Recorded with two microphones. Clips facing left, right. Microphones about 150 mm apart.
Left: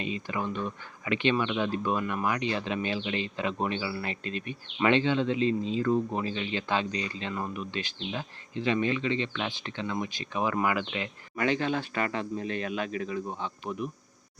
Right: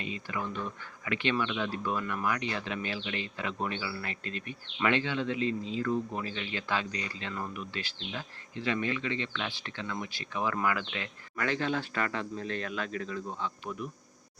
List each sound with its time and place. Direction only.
0.0 s speech: 20° left (ahead or behind)